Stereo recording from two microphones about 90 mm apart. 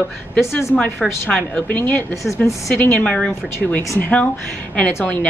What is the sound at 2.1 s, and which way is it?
Speech, 35° left (ahead or behind).